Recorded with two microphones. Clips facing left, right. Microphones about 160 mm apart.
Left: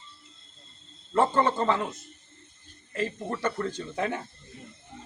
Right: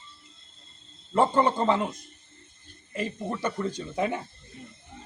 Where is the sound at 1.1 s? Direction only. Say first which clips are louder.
Right 1 dB; 15° right (ahead or behind).